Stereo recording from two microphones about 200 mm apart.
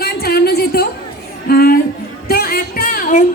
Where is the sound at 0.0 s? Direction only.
50° left (ahead or behind).